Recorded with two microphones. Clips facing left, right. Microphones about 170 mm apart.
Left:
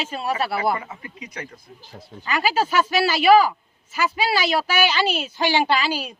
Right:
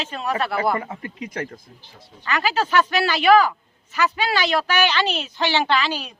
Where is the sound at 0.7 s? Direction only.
50° right (ahead or behind).